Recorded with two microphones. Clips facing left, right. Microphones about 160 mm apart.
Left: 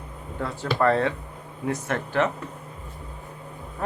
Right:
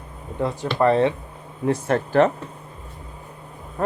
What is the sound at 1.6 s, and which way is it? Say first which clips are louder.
Speech: right 6 dB; 35° right (ahead or behind).